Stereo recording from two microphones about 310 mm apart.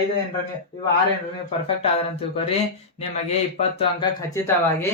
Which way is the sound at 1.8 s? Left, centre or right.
Centre.